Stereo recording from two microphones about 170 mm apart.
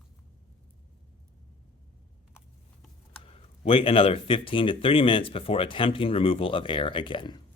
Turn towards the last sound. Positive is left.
turn(degrees=25)  # may be behind; listen again after turning